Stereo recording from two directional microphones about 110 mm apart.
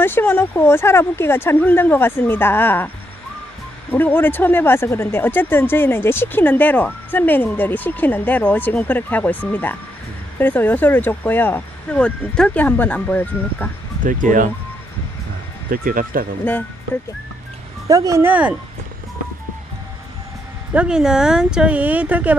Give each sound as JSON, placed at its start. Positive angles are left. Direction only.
{"t": 0.0, "sound": "speech", "side_deg": 20}
{"t": 3.9, "sound": "speech", "side_deg": 15}
{"t": 16.4, "sound": "speech", "side_deg": 15}
{"t": 17.8, "sound": "speech", "side_deg": -30}
{"t": 18.2, "sound": "speech", "side_deg": -15}
{"t": 20.7, "sound": "speech", "side_deg": -10}